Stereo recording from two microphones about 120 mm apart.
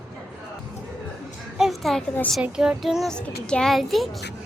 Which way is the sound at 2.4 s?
5° right (ahead or behind).